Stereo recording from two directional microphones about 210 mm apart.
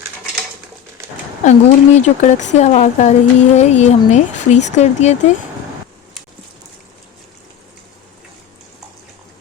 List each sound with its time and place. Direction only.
1.5 s speech: 35° left (ahead or behind)